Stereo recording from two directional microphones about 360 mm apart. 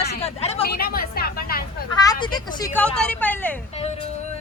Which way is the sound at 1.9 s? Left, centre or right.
Centre.